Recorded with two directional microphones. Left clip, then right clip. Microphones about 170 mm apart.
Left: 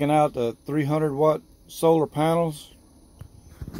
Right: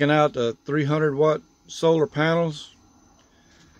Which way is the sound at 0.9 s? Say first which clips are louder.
Right 1 dB; 90° right.